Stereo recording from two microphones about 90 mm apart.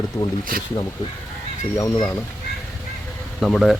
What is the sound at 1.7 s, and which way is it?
Speech, 40° left (ahead or behind).